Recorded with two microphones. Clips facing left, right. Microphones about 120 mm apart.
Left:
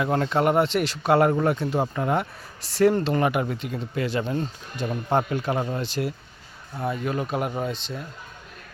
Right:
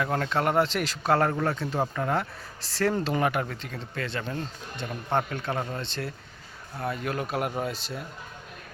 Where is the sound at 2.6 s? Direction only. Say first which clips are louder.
Left 7 dB; 90° right.